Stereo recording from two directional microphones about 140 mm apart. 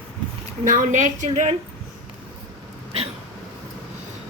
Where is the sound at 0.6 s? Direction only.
65° right (ahead or behind).